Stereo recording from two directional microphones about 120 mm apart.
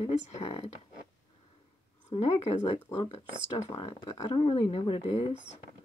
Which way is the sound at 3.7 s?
45° left (ahead or behind).